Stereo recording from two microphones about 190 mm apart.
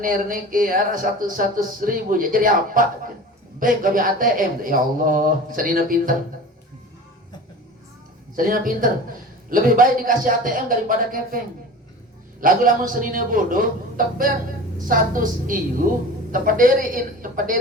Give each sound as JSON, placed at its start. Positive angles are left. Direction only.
{"t": 0.0, "sound": "speech", "side_deg": -45}
{"t": 8.4, "sound": "speech", "side_deg": -45}
{"t": 12.4, "sound": "speech", "side_deg": -45}